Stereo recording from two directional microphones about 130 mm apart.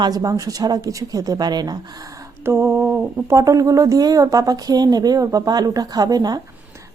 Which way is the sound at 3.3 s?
25° right (ahead or behind).